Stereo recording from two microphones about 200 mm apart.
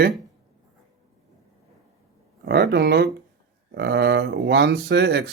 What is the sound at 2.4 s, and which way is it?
A man's voice, 55° right (ahead or behind).